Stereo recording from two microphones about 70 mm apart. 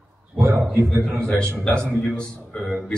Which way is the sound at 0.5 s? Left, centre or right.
Right.